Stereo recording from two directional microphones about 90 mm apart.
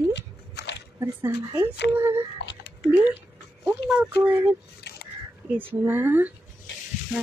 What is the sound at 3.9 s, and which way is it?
Speech, 15° right (ahead or behind).